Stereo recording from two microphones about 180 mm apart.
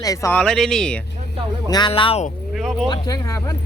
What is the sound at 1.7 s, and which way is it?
Speech, 25° left (ahead or behind).